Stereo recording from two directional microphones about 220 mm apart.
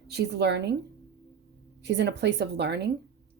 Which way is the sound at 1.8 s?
50° right (ahead or behind).